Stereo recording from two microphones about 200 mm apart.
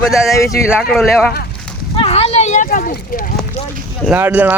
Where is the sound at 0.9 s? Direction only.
Centre (ahead or behind).